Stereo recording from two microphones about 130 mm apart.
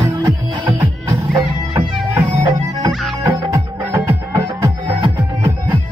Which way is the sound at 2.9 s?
Centre (ahead or behind).